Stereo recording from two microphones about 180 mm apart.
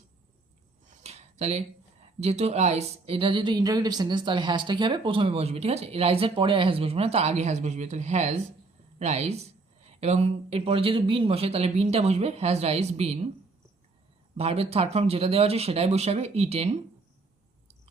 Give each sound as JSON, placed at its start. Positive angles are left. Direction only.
{"t": 0.9, "sound": "a sound", "side_deg": -35}
{"t": 2.2, "sound": "a woman's voice", "side_deg": -35}
{"t": 14.3, "sound": "speech", "side_deg": -35}